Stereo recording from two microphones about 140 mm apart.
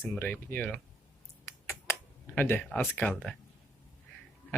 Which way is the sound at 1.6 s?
20° left (ahead or behind).